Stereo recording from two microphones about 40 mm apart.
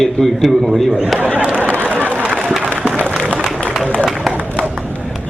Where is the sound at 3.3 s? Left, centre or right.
Left.